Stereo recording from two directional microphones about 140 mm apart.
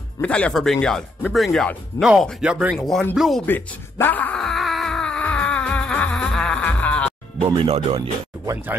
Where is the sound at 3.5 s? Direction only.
15° left (ahead or behind).